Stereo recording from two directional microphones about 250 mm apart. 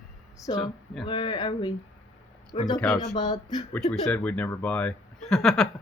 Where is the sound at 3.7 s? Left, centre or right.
Centre.